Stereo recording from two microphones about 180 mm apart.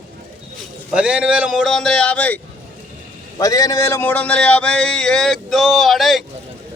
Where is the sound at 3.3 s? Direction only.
20° left (ahead or behind).